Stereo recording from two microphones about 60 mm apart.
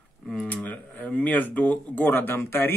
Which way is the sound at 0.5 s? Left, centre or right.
Left.